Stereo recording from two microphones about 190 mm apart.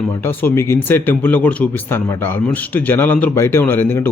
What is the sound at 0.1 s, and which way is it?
Speech, 10° left (ahead or behind).